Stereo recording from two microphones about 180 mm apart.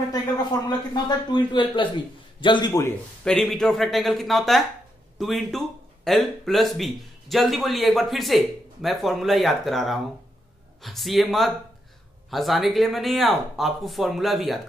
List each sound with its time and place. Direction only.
0.1 s speech: 20° left (ahead or behind)
3.3 s speech: 5° left (ahead or behind)